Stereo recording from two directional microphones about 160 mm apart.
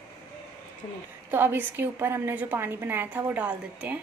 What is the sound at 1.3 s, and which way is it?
A woman's voice, 15° right (ahead or behind).